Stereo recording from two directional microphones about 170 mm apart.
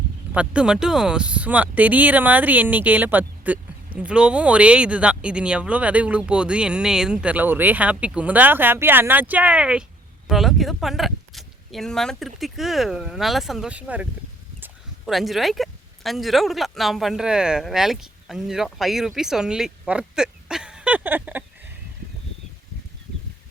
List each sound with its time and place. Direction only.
0.3 s speech: 5° right (ahead or behind)